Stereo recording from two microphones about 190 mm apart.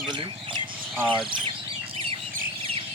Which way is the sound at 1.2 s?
25° right (ahead or behind).